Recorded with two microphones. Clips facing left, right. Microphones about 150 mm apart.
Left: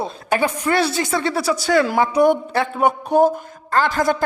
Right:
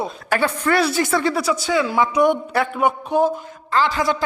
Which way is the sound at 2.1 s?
35° left (ahead or behind).